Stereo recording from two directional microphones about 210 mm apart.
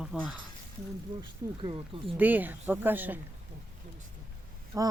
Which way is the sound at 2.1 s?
10° right (ahead or behind).